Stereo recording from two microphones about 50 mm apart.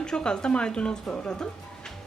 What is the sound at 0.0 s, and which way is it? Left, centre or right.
A woman's voice, centre.